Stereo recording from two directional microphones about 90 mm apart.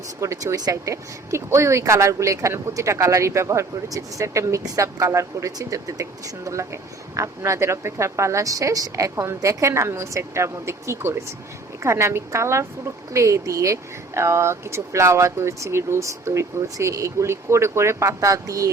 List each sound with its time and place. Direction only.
0.2 s a woman's voice: 40° right (ahead or behind)